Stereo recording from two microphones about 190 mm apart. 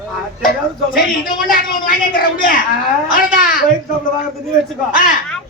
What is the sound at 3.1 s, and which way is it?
Speech, 45° left (ahead or behind).